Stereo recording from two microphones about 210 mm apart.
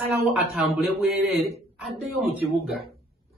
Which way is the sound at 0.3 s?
Centre (ahead or behind).